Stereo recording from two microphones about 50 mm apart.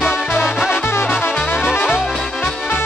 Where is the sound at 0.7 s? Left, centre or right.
Left.